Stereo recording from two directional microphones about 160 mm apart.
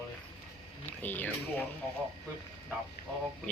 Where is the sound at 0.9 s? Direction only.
10° left (ahead or behind).